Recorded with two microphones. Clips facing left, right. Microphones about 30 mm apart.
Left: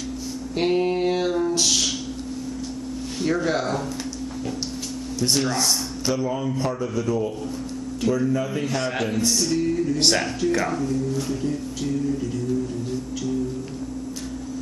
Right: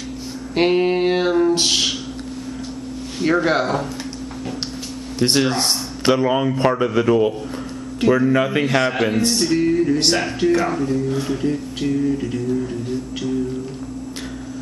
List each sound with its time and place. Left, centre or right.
0.6 s speech: right
3.2 s a man's voice: right
5.2 s speech: right
8.0 s speech: right
8.3 s speech: right
8.8 s a man's voice: right
9.9 s speech: centre; by 12.4 s right